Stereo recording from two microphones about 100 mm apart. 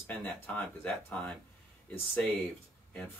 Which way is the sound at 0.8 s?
10° left (ahead or behind).